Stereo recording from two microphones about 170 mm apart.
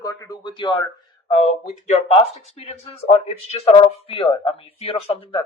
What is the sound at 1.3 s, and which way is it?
Speech, 40° left (ahead or behind).